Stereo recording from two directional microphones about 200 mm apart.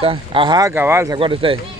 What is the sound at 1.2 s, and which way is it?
Speech, 25° right (ahead or behind).